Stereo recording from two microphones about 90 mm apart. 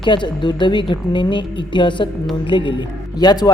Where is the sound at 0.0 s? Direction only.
60° left (ahead or behind).